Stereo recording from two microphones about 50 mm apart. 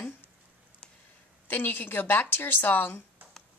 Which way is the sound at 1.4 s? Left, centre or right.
Left.